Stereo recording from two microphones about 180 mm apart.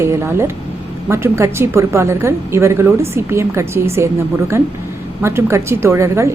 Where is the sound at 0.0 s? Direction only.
15° right (ahead or behind).